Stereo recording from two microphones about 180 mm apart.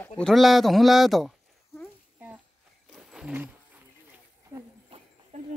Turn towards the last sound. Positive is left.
turn(degrees=-35)  # may be behind; listen again after turning